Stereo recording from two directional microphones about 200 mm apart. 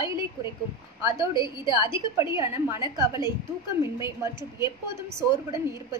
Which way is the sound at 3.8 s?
15° right (ahead or behind).